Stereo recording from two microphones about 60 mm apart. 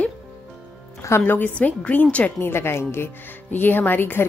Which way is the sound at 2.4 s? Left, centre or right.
Left.